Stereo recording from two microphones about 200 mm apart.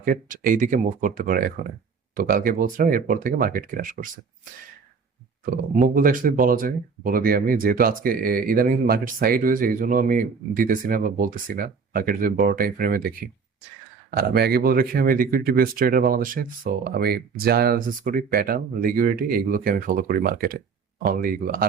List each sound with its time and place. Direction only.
0.0 s speech: 40° right (ahead or behind)
5.7 s speech: 45° right (ahead or behind)